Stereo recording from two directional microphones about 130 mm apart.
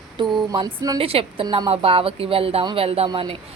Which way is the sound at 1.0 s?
45° right (ahead or behind).